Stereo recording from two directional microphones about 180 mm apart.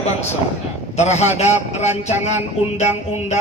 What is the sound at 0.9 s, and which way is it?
A man's voice, 40° left (ahead or behind).